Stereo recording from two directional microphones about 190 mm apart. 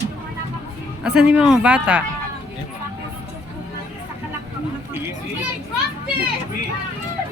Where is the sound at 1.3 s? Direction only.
5° right (ahead or behind).